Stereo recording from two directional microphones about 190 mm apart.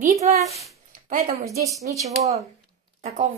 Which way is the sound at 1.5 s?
15° right (ahead or behind).